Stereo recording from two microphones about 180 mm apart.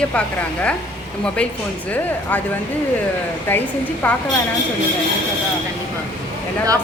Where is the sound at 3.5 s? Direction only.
10° left (ahead or behind).